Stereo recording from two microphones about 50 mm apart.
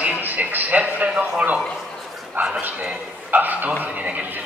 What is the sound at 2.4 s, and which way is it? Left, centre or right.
A man's voice, right.